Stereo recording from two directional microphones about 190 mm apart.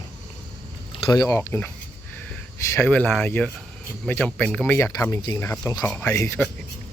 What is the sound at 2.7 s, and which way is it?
Speech, 10° left (ahead or behind).